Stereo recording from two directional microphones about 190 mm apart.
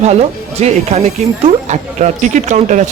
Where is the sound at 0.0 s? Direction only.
35° right (ahead or behind).